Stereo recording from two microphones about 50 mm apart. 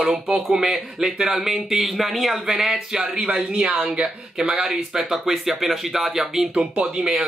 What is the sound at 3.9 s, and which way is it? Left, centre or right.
Speech, right.